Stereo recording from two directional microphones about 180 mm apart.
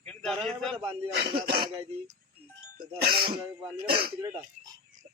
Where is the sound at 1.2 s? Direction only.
60° right (ahead or behind).